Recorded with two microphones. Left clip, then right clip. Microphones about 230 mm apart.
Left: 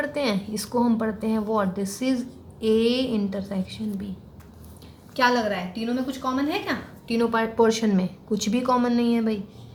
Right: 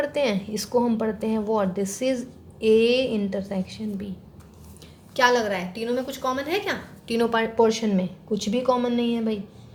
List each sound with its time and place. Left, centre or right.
0.0 s a woman's voice: centre
5.1 s a woman's voice: right
7.2 s a woman's voice: right
7.5 s speech: centre